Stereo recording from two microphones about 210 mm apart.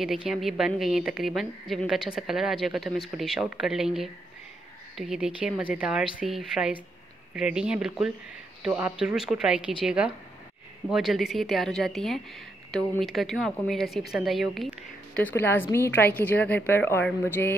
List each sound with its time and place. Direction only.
0.0 s a woman's voice: centre (ahead or behind)